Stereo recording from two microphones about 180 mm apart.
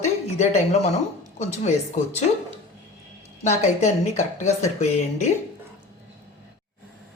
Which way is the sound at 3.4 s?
40° left (ahead or behind).